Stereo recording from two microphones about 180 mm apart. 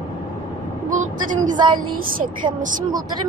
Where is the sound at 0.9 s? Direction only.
45° right (ahead or behind).